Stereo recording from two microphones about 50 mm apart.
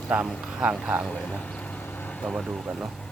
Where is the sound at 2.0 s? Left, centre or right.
Left.